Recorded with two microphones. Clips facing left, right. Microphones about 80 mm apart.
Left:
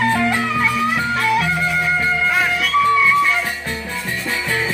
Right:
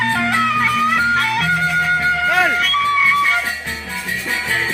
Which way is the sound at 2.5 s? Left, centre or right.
Right.